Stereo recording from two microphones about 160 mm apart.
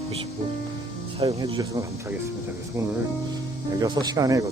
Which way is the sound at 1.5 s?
20° right (ahead or behind).